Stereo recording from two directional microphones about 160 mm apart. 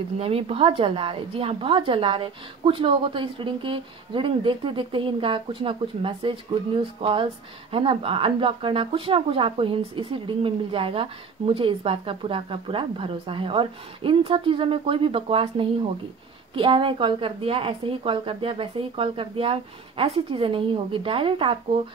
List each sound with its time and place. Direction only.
0.2 s speech: 35° right (ahead or behind)